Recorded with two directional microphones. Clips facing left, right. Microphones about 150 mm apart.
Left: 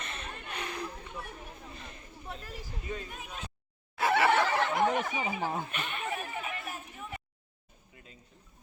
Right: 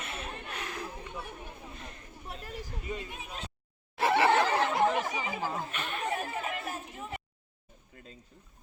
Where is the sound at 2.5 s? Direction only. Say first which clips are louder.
Right 3 dB; 5° left (ahead or behind).